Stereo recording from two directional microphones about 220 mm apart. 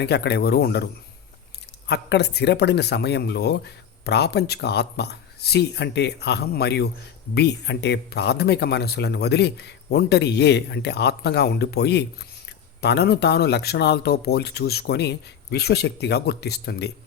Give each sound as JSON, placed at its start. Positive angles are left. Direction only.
{"t": 0.0, "sound": "speech", "side_deg": 50}
{"t": 1.9, "sound": "speech", "side_deg": 50}